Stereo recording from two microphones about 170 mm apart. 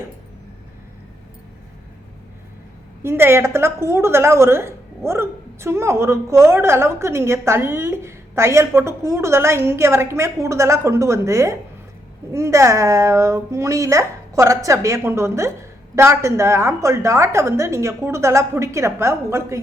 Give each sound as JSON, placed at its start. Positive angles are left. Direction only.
{"t": 3.0, "sound": "a woman's voice", "side_deg": -15}